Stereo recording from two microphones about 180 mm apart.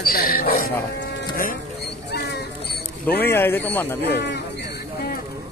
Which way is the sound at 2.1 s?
65° left (ahead or behind).